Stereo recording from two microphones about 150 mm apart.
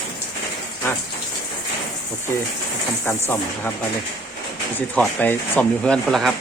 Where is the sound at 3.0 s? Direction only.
15° left (ahead or behind).